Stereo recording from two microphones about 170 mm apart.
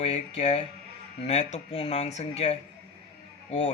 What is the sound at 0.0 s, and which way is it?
Speech, 40° left (ahead or behind).